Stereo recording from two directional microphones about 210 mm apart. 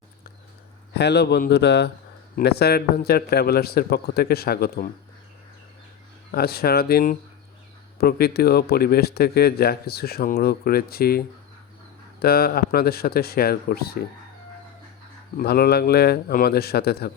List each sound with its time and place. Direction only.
0.9 s speech: 50° left (ahead or behind)
6.3 s speech: 50° left (ahead or behind)
15.4 s speech: 50° left (ahead or behind)